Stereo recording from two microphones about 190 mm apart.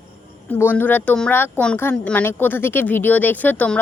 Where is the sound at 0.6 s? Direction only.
10° left (ahead or behind).